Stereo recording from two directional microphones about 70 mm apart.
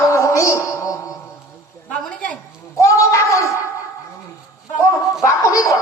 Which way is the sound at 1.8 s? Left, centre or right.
Centre.